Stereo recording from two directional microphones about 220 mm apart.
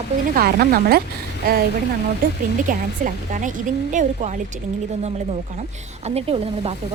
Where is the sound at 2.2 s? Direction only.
40° right (ahead or behind).